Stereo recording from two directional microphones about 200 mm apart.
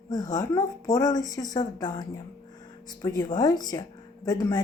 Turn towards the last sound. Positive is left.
turn(degrees=20)  # may be behind; listen again after turning